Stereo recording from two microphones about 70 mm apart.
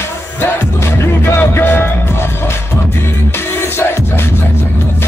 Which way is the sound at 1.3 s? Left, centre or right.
Left.